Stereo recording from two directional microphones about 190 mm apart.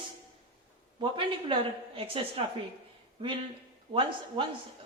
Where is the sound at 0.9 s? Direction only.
25° right (ahead or behind).